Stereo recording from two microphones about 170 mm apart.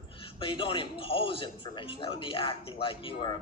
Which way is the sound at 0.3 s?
30° left (ahead or behind).